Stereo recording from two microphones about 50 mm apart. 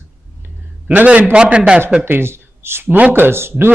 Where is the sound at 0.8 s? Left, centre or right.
Right.